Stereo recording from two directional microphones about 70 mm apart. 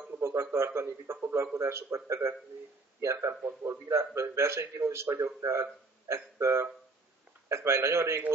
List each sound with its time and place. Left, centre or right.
0.2 s speech: right
3.4 s speech: right
3.8 s speech: right